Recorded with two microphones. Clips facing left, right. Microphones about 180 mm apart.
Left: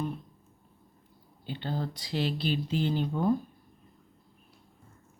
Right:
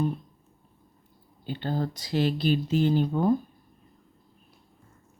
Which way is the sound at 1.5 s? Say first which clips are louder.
Right 4 dB; 45° right (ahead or behind).